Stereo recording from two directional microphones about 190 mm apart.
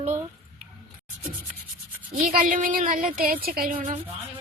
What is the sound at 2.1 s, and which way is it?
Speech, 45° right (ahead or behind).